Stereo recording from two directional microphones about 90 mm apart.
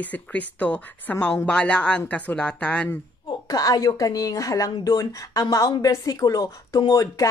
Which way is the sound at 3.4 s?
45° left (ahead or behind).